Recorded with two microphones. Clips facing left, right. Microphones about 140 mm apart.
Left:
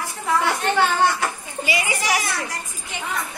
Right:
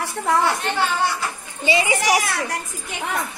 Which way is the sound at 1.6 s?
25° right (ahead or behind).